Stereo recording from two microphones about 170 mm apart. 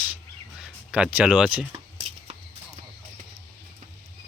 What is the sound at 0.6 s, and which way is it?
Speech, 5° right (ahead or behind).